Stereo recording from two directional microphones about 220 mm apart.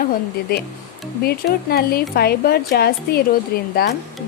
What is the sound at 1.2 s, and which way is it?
Speech, 45° left (ahead or behind).